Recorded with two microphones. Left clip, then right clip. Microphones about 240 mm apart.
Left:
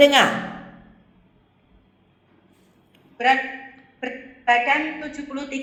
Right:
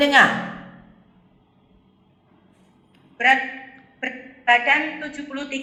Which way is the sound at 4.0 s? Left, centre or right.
Centre.